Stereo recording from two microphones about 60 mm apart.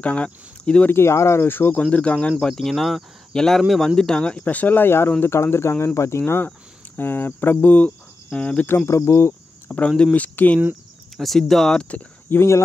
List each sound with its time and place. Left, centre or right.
0.0 s speech: centre
0.8 s speech: left
1.5 s speech: left
1.8 s speech: left
2.4 s speech: centre; by 6.5 s left
7.0 s cricket: left
8.6 s cricket: left
9.7 s speech: centre
11.1 s speech: centre
12.3 s speech: left